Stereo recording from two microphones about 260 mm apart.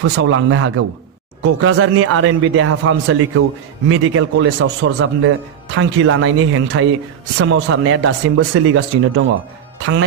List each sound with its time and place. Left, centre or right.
0.0 s speech: right